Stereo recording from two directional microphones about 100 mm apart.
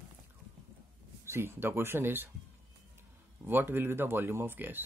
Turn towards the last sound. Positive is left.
turn(degrees=-20)  # may be behind; listen again after turning